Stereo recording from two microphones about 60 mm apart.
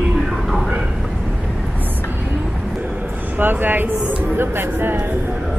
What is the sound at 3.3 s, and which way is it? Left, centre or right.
Speech, right.